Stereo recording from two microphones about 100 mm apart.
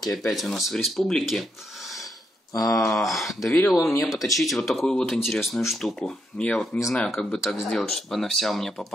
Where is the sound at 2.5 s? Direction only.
35° left (ahead or behind).